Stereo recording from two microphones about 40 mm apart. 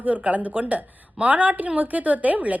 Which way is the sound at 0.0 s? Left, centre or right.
Right.